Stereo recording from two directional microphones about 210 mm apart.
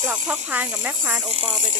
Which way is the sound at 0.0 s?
5° right (ahead or behind).